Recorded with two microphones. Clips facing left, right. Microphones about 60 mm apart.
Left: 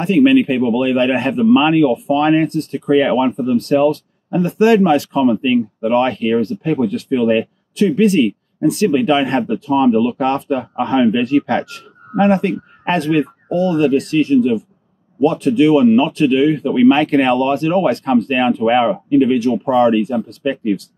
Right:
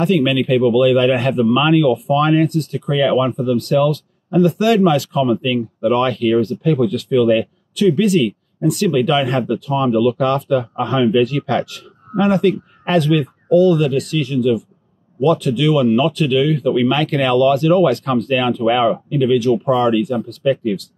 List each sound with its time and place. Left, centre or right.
0.0 s speech: left